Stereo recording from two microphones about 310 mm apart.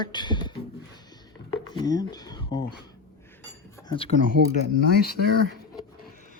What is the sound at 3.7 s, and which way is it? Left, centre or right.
Cutlery, centre.